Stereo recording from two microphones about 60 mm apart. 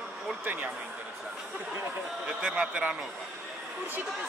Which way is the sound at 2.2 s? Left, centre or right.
Right.